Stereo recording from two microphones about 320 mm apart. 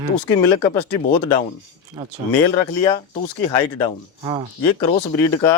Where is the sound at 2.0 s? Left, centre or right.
Centre.